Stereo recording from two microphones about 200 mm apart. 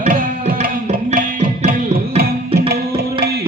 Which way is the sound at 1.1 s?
40° right (ahead or behind).